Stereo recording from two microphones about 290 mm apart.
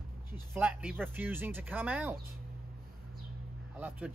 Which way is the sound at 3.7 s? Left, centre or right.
Centre.